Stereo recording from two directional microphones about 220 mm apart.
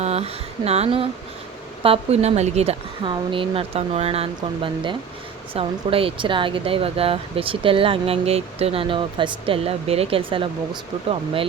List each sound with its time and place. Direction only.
0.0 s speech: 30° right (ahead or behind)